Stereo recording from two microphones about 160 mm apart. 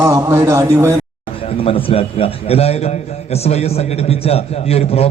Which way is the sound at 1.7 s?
35° left (ahead or behind).